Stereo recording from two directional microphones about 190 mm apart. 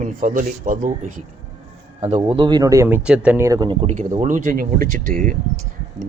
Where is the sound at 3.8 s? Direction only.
40° right (ahead or behind).